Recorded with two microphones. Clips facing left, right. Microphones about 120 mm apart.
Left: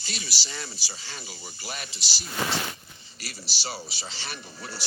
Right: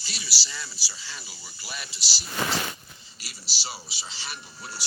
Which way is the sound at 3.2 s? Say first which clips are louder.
Left 4 dB; 55° left (ahead or behind).